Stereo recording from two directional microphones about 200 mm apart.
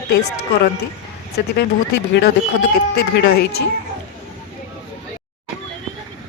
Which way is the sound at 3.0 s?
55° left (ahead or behind).